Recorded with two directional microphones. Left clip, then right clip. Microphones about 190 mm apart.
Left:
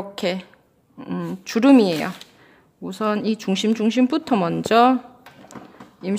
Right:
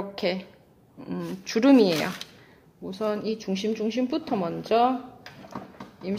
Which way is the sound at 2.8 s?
35° left (ahead or behind).